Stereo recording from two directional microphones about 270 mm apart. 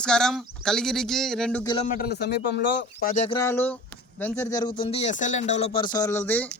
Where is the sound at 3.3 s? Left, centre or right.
Centre.